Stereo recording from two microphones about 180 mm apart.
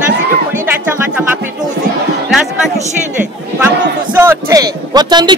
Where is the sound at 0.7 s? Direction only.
10° right (ahead or behind).